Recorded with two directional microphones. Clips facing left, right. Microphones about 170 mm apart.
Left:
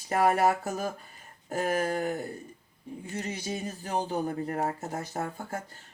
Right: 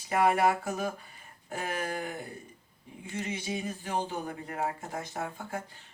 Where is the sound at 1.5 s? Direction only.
40° left (ahead or behind).